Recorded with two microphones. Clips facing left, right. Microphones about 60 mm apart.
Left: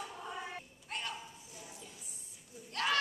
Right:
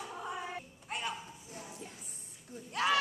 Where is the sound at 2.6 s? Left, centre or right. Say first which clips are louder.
Right 3 dB; centre.